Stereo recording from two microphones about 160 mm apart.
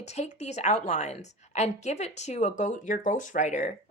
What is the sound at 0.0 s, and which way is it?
A woman's voice, 45° left (ahead or behind).